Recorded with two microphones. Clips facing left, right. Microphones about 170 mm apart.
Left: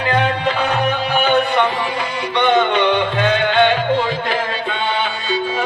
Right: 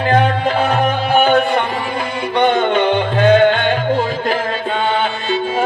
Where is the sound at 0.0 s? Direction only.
45° right (ahead or behind).